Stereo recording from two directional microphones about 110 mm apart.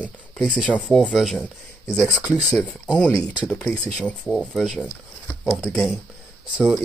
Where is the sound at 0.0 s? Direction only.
5° right (ahead or behind).